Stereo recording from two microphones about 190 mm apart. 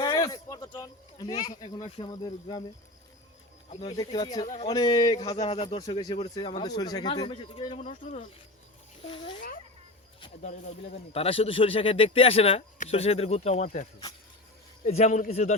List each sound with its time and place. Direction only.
0.0 s a sound: 20° left (ahead or behind)
1.4 s speech: 20° left (ahead or behind)
3.7 s speech: 35° left (ahead or behind)
3.9 s speech: 20° left (ahead or behind)
4.4 s a man's voice: 35° left (ahead or behind)
4.7 s speech: 20° left (ahead or behind)
8.0 s speech: 45° left (ahead or behind)
9.1 s a man's voice: 25° left (ahead or behind)
14.8 s a man's voice: 35° left (ahead or behind)